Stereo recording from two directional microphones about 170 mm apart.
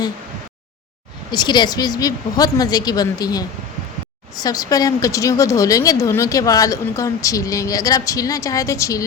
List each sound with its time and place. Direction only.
1.3 s a woman's voice: 25° left (ahead or behind)
4.4 s a woman's voice: 20° left (ahead or behind)